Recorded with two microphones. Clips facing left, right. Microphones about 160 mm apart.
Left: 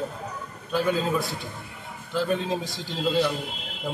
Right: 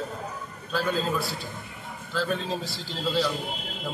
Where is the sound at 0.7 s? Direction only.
15° left (ahead or behind).